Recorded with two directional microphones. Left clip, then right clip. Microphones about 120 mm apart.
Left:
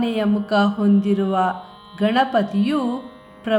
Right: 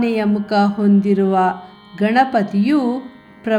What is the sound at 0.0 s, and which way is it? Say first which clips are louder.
Music: right 3 dB; 20° right (ahead or behind).